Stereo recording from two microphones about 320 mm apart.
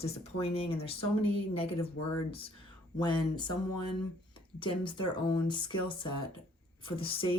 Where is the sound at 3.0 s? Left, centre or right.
Centre.